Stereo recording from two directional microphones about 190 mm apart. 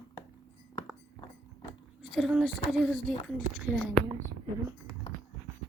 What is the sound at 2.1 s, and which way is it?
A woman's voice, centre (ahead or behind).